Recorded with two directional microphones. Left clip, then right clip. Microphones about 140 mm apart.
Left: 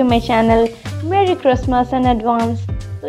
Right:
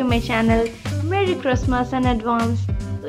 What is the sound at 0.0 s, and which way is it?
Speech, 35° left (ahead or behind).